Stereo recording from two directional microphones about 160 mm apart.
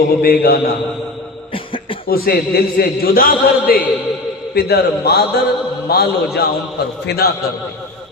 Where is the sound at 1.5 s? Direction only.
35° left (ahead or behind).